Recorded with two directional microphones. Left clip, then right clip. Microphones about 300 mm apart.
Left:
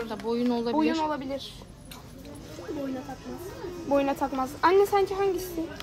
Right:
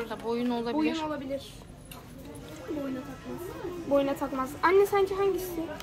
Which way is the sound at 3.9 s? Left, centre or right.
Centre.